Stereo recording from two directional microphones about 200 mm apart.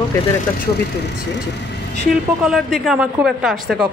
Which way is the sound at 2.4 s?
Centre (ahead or behind).